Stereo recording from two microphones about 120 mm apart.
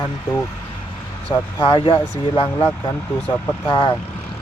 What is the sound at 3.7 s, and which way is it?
Speech, 40° left (ahead or behind).